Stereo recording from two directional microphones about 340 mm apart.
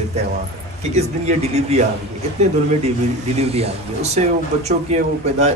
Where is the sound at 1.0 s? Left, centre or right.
Centre.